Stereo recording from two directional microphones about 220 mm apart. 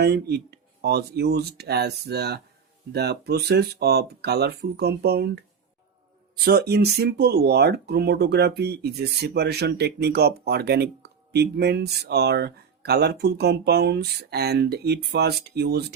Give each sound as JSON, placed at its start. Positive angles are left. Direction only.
{"t": 0.0, "sound": "speech", "side_deg": -50}
{"t": 6.4, "sound": "speech", "side_deg": -45}